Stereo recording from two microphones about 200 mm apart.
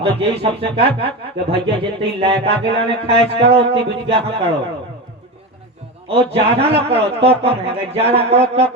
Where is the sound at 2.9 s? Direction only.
30° right (ahead or behind).